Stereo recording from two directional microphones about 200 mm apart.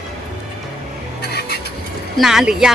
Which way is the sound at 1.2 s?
55° left (ahead or behind).